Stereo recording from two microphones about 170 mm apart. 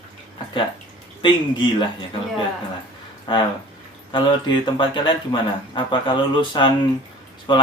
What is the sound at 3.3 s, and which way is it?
Speech, 25° left (ahead or behind).